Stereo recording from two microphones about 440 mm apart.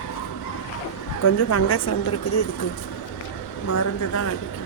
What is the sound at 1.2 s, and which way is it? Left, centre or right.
Speech, left.